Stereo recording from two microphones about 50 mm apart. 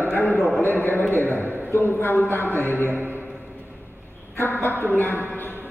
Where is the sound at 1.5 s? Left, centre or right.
Right.